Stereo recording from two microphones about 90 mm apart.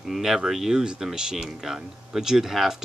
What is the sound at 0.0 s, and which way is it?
Speech, 5° right (ahead or behind).